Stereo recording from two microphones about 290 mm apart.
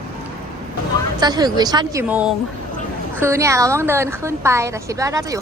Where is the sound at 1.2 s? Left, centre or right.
Centre.